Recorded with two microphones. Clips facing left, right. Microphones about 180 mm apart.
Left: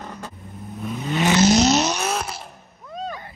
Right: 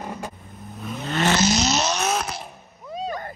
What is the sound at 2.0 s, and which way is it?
Vehicle, centre (ahead or behind).